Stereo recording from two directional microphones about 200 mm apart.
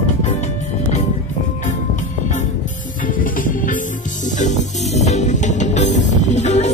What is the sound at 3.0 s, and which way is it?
Music, 45° left (ahead or behind).